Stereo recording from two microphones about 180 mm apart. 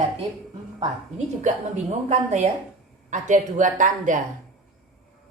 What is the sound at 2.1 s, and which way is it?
A woman's voice, 40° right (ahead or behind).